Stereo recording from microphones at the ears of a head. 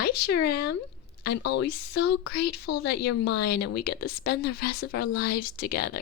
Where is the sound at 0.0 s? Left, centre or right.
Left.